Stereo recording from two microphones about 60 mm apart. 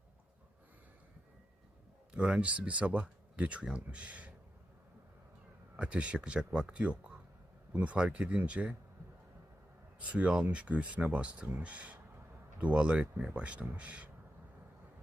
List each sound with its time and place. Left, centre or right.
2.1 s speech: centre
5.7 s speech: centre
10.0 s speech: right